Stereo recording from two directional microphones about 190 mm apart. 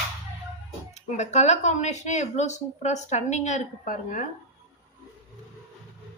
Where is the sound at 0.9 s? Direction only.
35° left (ahead or behind).